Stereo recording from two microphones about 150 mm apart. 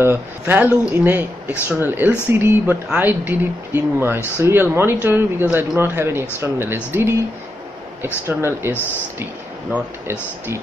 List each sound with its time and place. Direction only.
0.0 s speech: 15° right (ahead or behind)
8.3 s speech: 15° right (ahead or behind)